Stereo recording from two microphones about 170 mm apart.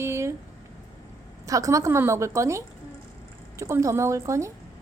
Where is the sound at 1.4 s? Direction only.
20° right (ahead or behind).